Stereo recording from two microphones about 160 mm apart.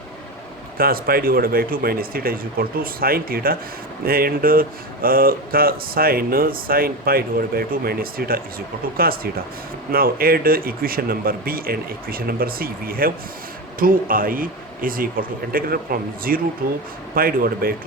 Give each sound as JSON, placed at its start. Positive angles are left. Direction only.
{"t": 0.8, "sound": "speech", "side_deg": -65}